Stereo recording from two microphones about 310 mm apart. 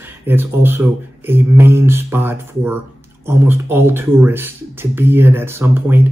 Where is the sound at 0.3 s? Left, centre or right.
Centre.